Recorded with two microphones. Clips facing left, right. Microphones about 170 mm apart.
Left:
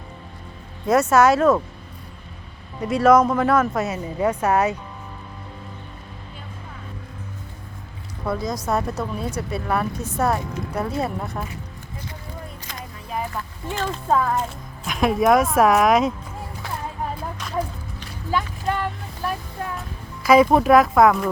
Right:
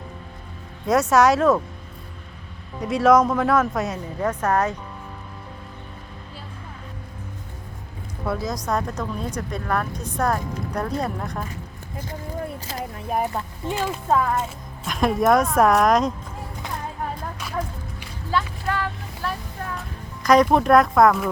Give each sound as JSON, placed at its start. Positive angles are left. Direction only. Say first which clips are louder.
{"t": 0.9, "sound": "speech", "louder": "left 1 dB", "side_deg": 0}
{"t": 2.8, "sound": "speech", "louder": "left 1 dB", "side_deg": 0}
{"t": 8.2, "sound": "speech", "louder": "left 1 dB", "side_deg": 0}
{"t": 12.7, "sound": "a sound", "louder": "right 4 dB", "side_deg": -30}
{"t": 13.7, "sound": "speech", "louder": "even", "side_deg": -10}
{"t": 18.3, "sound": "a sound", "louder": "left 1 dB", "side_deg": 15}
{"t": 20.2, "sound": "speech", "louder": "left 2 dB", "side_deg": 5}